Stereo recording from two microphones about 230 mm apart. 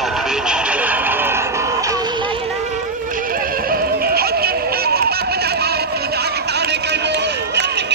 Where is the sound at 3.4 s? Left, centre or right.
Right.